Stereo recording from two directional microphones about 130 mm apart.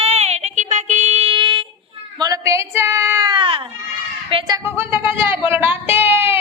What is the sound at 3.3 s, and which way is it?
Baby cry, 40° right (ahead or behind).